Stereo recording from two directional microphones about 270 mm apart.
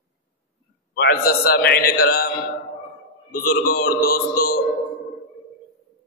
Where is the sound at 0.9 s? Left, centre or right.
Left.